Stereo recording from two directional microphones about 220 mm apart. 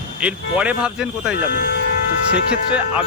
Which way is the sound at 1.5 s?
45° left (ahead or behind).